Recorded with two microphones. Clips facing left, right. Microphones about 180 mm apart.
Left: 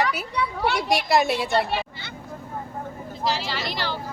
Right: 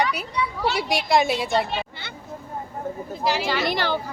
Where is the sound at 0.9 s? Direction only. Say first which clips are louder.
Even; centre (ahead or behind).